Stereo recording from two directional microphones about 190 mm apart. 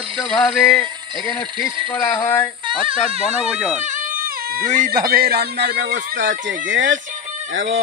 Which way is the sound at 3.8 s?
45° right (ahead or behind).